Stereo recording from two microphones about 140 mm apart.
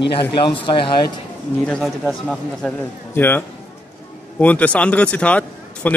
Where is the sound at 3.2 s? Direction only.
15° left (ahead or behind).